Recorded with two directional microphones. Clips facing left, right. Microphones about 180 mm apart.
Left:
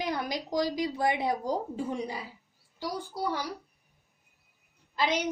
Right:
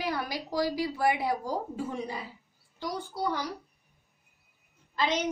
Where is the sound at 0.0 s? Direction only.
20° left (ahead or behind).